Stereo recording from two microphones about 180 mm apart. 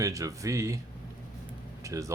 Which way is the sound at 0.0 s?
20° right (ahead or behind).